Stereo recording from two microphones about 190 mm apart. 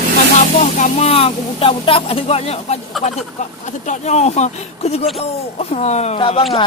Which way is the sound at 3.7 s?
40° left (ahead or behind).